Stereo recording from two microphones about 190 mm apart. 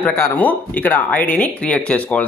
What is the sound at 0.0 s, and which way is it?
Speech, 10° left (ahead or behind).